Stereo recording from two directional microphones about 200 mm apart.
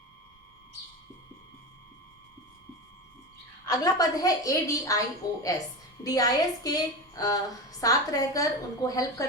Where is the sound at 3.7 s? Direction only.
15° left (ahead or behind).